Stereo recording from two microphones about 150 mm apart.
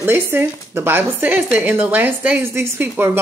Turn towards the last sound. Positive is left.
turn(degrees=-15)  # may be behind; listen again after turning